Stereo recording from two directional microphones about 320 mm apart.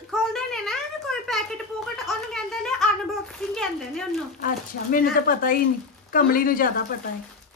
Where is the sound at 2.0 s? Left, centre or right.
Centre.